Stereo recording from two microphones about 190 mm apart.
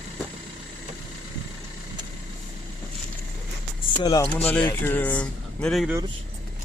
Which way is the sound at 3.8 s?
20° left (ahead or behind).